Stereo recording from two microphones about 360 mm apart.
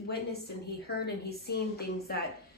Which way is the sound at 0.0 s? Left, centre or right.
Left.